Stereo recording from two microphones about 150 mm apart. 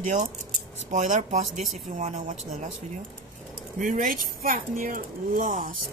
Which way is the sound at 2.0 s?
55° right (ahead or behind).